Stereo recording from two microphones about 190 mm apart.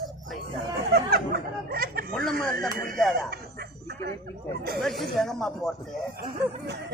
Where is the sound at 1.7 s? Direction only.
55° right (ahead or behind).